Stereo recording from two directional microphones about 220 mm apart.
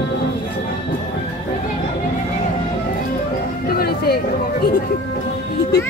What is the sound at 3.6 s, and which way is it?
Music, 45° left (ahead or behind).